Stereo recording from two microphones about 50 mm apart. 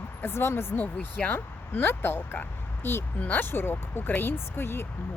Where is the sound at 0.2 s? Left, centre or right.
Left.